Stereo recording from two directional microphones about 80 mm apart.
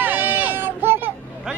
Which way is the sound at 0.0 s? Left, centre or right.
Right.